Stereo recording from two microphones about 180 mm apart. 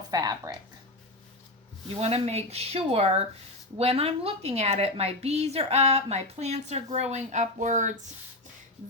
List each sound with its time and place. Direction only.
0.1 s speech: 20° right (ahead or behind)
2.0 s a woman's voice: 35° right (ahead or behind)